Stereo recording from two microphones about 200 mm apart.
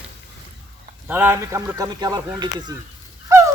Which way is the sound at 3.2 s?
15° right (ahead or behind).